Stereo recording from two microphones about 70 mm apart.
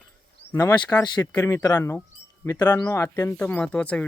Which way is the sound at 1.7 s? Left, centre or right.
Left.